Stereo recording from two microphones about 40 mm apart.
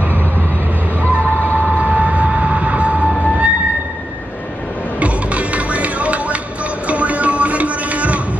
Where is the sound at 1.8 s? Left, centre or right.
Right.